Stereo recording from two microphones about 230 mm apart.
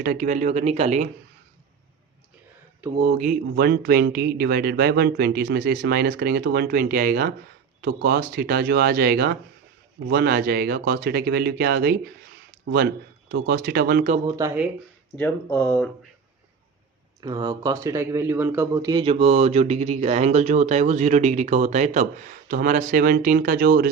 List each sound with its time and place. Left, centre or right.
0.0 s speech: right
3.0 s speech: right
13.3 s speech: right
14.3 s speech: centre
15.1 s speech: centre
17.2 s speech: centre; by 23.9 s right